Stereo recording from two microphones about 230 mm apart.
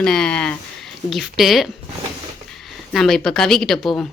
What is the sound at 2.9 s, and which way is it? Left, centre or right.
Speech, centre.